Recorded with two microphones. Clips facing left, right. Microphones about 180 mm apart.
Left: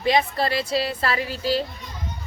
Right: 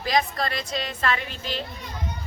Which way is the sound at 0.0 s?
30° left (ahead or behind).